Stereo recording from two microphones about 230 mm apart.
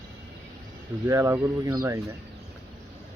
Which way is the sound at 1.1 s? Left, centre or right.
Centre.